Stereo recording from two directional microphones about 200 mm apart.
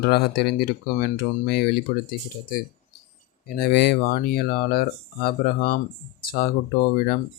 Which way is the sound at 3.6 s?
55° left (ahead or behind).